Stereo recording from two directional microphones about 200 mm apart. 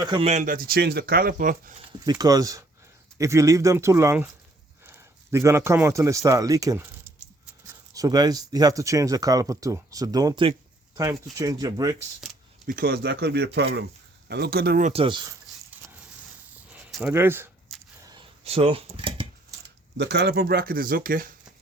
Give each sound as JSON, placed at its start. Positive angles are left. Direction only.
{"t": 0.0, "sound": "speech", "side_deg": -20}
{"t": 0.3, "sound": "speech", "side_deg": -40}
{"t": 2.0, "sound": "a man's voice", "side_deg": -20}
{"t": 12.6, "sound": "speech", "side_deg": -50}
{"t": 15.0, "sound": "speech", "side_deg": -25}
{"t": 15.8, "sound": "a sound", "side_deg": -10}
{"t": 18.0, "sound": "a sound", "side_deg": -20}
{"t": 20.0, "sound": "speech", "side_deg": -55}